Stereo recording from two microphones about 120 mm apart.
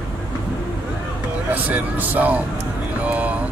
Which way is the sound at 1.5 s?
15° right (ahead or behind).